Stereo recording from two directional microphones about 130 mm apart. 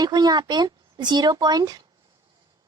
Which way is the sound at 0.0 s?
30° right (ahead or behind).